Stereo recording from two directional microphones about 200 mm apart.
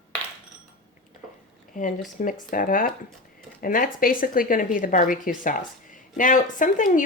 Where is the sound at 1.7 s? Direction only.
40° left (ahead or behind).